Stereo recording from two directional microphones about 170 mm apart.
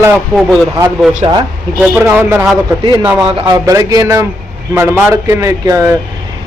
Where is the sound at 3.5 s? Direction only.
20° right (ahead or behind).